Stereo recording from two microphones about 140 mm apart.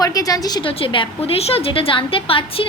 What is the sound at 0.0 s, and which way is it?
Speech, 25° left (ahead or behind).